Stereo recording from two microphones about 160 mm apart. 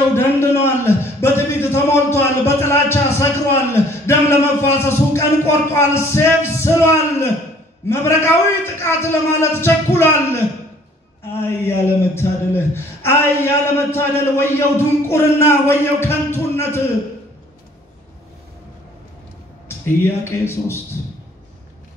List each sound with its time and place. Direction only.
0.1 s a man's voice: 15° left (ahead or behind)
11.4 s a man's voice: 15° left (ahead or behind)
20.0 s a man's voice: 15° left (ahead or behind)